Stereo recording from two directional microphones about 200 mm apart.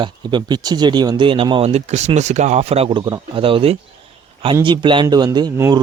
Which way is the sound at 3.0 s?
20° right (ahead or behind).